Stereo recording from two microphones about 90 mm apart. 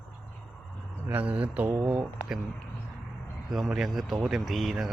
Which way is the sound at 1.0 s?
20° right (ahead or behind).